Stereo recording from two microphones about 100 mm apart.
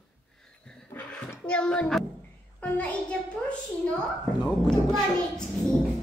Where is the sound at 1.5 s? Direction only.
10° left (ahead or behind).